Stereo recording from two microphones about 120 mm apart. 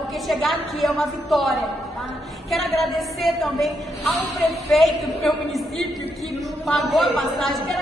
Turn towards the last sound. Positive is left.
turn(degrees=0)  # may be behind; listen again after turning